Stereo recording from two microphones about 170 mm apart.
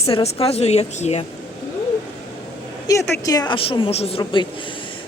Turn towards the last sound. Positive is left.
turn(degrees=35)  # may be behind; listen again after turning